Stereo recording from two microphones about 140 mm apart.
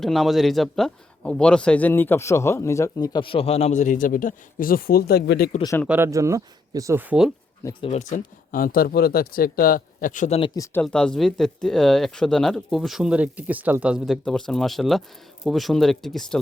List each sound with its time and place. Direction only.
0.0 s speech: centre (ahead or behind); by 5.5 s 90° left
5.9 s speech: 20° right (ahead or behind)
7.8 s speech: 50° left (ahead or behind)
8.5 s speech: 90° left; by 10.3 s 65° left (ahead or behind)
10.8 s speech: 5° left (ahead or behind)